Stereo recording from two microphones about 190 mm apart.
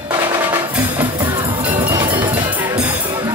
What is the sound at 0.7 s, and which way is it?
Music, 10° right (ahead or behind).